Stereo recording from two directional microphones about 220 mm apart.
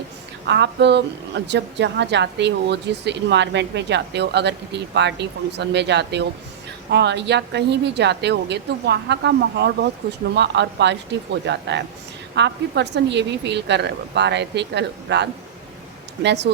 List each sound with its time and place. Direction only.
0.4 s speech: 50° right (ahead or behind)